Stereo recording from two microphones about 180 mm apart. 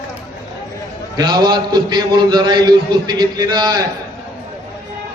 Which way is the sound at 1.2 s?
25° right (ahead or behind).